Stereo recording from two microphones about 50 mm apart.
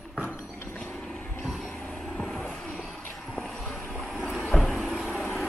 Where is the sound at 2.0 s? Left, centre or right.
Centre.